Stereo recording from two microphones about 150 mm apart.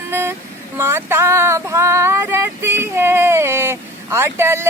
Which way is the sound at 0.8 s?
15° right (ahead or behind).